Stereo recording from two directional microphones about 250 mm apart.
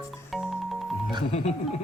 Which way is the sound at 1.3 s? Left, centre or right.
Left.